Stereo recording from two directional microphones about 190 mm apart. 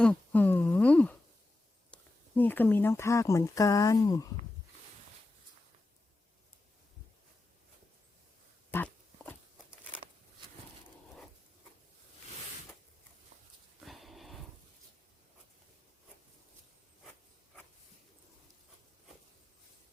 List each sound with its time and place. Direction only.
0.0 s a sound: 5° left (ahead or behind)
1.9 s speech: 10° left (ahead or behind)
8.7 s pig: 10° left (ahead or behind)
13.8 s dog: centre (ahead or behind)